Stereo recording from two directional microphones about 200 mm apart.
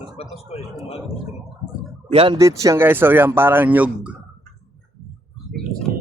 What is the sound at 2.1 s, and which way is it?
Speech, 30° right (ahead or behind).